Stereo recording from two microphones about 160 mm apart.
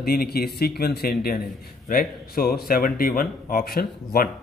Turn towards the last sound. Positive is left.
turn(degrees=70)  # may be behind; listen again after turning